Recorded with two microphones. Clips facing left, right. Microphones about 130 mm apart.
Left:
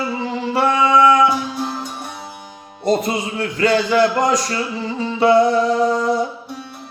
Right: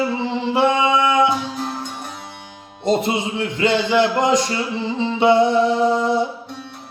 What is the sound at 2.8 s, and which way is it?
Speech, 25° right (ahead or behind).